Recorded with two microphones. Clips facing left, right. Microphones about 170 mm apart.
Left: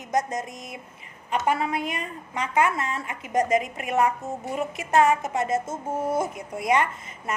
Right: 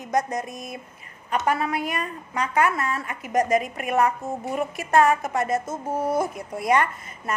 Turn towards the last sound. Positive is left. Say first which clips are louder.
# right 1 dB
turn(degrees=20)  # may be behind; listen again after turning